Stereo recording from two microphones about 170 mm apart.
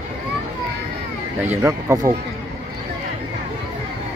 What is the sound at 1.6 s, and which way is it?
Speech, 15° right (ahead or behind).